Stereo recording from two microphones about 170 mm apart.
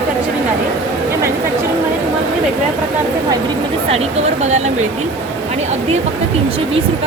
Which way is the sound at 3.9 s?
40° right (ahead or behind).